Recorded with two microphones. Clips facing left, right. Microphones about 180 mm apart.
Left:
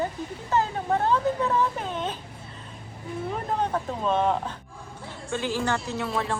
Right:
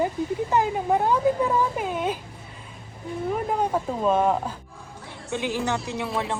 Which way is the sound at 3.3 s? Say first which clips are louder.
Right 3 dB; 10° right (ahead or behind).